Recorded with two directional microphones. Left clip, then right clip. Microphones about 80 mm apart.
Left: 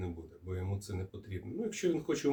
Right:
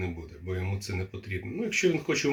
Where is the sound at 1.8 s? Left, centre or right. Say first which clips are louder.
Right 6 dB; right.